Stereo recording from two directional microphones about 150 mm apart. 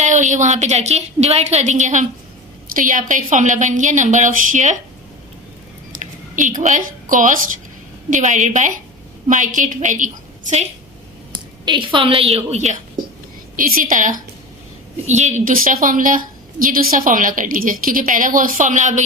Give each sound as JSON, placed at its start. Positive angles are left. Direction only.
{"t": 0.0, "sound": "a woman's voice", "side_deg": -55}
{"t": 6.0, "sound": "a sound", "side_deg": -55}
{"t": 6.6, "sound": "a woman's voice", "side_deg": -60}
{"t": 11.6, "sound": "a woman's voice", "side_deg": -30}
{"t": 13.6, "sound": "a woman's voice", "side_deg": -70}
{"t": 15.0, "sound": "a woman's voice", "side_deg": -50}